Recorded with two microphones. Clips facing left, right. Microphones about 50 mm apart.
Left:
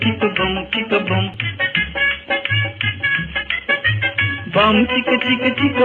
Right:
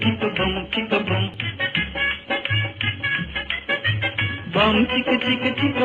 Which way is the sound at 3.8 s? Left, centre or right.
Left.